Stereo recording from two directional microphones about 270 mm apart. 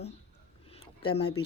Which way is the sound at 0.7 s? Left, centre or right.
Centre.